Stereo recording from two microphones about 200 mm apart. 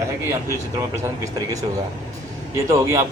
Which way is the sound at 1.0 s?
15° right (ahead or behind).